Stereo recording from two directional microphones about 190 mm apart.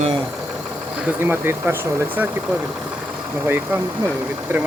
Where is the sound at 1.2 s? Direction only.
10° right (ahead or behind).